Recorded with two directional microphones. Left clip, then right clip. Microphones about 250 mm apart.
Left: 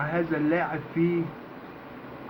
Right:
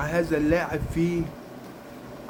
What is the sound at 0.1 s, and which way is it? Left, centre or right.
Speech, right.